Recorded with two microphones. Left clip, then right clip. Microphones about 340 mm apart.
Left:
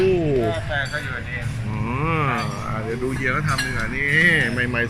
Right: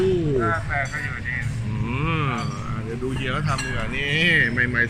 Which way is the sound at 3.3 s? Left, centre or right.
Centre.